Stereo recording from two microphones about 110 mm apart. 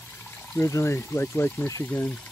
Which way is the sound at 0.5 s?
25° left (ahead or behind).